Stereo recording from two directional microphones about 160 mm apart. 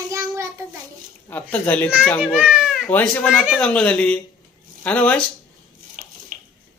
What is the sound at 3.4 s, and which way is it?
A man's voice, centre (ahead or behind).